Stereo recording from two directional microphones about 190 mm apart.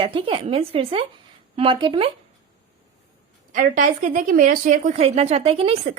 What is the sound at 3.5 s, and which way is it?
A woman's voice, 45° right (ahead or behind).